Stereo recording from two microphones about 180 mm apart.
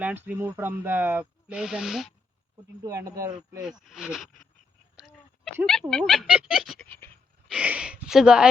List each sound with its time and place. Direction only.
0.0 s speech: 10° right (ahead or behind)
2.8 s speech: 20° right (ahead or behind)
3.6 s speech: 5° right (ahead or behind)
4.9 s a sound: centre (ahead or behind)
5.6 s speech: 5° left (ahead or behind)
6.8 s a sound: 10° left (ahead or behind)
7.4 s speech: 5° right (ahead or behind)